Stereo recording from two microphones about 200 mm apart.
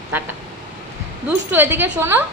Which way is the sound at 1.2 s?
10° right (ahead or behind).